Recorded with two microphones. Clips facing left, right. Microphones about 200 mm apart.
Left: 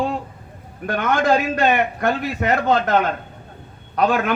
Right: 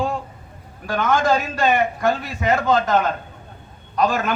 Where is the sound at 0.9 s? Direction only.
60° left (ahead or behind).